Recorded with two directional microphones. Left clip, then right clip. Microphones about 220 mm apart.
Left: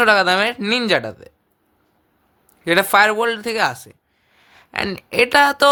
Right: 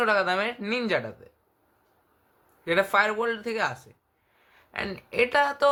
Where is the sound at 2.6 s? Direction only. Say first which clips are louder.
Left 9 dB; 50° left (ahead or behind).